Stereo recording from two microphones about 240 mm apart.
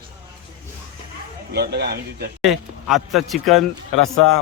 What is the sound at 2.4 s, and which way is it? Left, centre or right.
Speech, centre.